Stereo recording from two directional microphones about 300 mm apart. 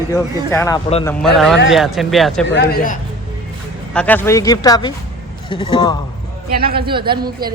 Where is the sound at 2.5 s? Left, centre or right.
Left.